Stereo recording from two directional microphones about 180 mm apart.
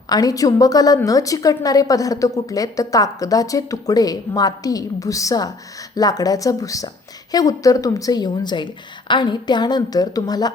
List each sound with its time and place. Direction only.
0.1 s a woman's voice: 20° left (ahead or behind)